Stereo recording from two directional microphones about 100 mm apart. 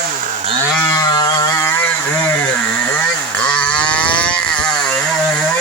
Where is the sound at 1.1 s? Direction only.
40° left (ahead or behind); by 2.3 s 20° left (ahead or behind).